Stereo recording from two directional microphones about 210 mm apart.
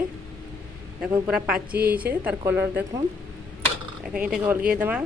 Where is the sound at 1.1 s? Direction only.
5° right (ahead or behind).